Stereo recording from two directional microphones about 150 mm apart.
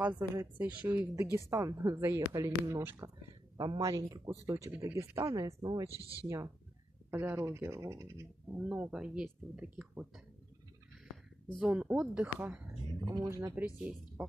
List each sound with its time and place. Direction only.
0.4 s speech: 10° right (ahead or behind)
11.5 s speech: 10° right (ahead or behind)
13.0 s speech: 30° right (ahead or behind)
13.3 s speech: 15° right (ahead or behind)